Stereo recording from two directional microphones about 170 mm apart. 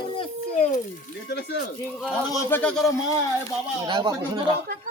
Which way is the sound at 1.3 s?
70° left (ahead or behind).